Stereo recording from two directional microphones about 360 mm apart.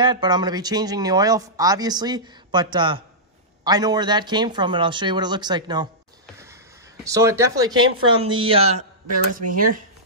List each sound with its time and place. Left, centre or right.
0.0 s speech: centre
7.1 s speech: centre